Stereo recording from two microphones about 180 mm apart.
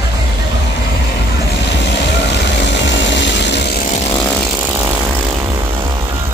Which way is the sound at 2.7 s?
80° left.